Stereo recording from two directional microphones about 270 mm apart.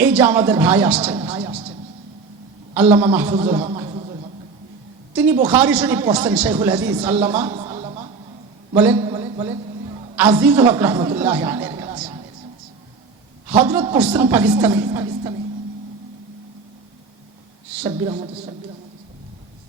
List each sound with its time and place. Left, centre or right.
0.0 s a man's voice: centre
1.2 s music: right
3.0 s a man's voice: centre
3.3 s a man's voice: centre
5.1 s a man's voice: centre
7.4 s a sound: centre
10.2 s a man's voice: centre
13.5 s a man's voice: centre
17.8 s a man's voice: centre